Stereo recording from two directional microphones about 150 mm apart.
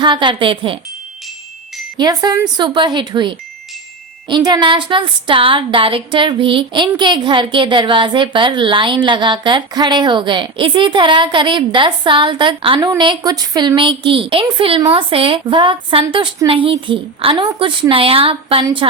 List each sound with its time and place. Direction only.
0.0 s a woman's voice: 30° right (ahead or behind)
2.0 s a woman's voice: 25° right (ahead or behind)
14.8 s speech: 25° right (ahead or behind)
15.1 s a woman's voice: 35° right (ahead or behind)